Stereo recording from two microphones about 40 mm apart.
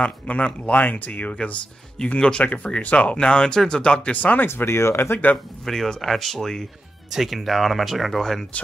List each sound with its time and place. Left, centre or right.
0.0 s speech: left
0.7 s speech: left
2.4 s speech: left
3.2 s speech: left
4.2 s speech: left
4.5 s speech: left
5.7 s speech: centre